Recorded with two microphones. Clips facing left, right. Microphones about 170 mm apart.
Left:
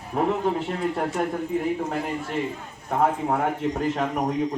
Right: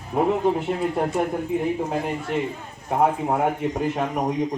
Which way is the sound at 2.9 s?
15° right (ahead or behind).